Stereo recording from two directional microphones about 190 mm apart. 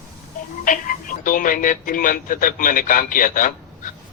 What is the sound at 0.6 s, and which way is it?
Speech, 45° left (ahead or behind).